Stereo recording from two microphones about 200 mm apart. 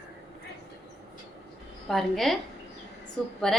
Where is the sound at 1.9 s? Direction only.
Centre (ahead or behind).